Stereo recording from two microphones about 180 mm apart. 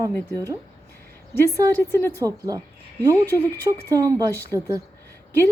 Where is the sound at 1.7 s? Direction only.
10° left (ahead or behind).